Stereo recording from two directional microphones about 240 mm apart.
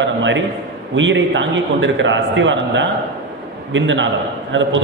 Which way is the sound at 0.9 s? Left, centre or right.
Right.